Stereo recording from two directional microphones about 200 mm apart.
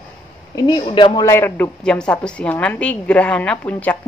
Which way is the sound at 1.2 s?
10° left (ahead or behind).